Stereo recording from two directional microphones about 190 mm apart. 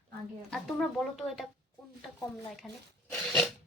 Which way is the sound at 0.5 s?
Centre (ahead or behind).